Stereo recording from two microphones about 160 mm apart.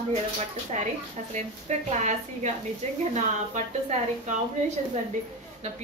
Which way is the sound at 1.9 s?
45° right (ahead or behind).